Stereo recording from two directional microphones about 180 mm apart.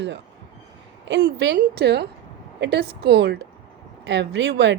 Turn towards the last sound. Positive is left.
turn(degrees=-75)  # may be behind; listen again after turning